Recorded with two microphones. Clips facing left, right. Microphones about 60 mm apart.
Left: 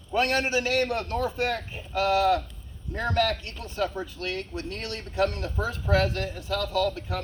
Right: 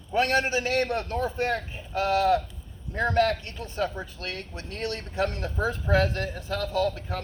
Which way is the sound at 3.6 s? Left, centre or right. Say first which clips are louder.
Even; centre.